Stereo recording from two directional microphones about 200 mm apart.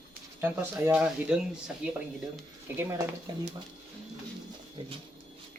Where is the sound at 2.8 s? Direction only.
15° right (ahead or behind).